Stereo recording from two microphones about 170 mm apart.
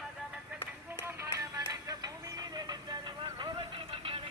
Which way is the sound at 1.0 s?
15° right (ahead or behind).